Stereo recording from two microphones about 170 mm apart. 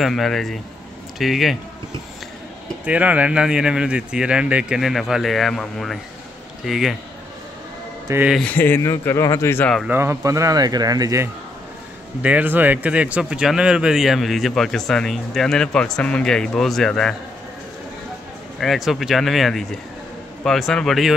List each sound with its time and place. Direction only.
0.0 s speech: centre (ahead or behind)
2.8 s speech: 10° right (ahead or behind)
8.1 s speech: 10° right (ahead or behind)
8.4 s speech: 10° left (ahead or behind)
9.8 s speech: 15° right (ahead or behind)
12.2 s speech: 10° right (ahead or behind)
18.6 s speech: centre (ahead or behind)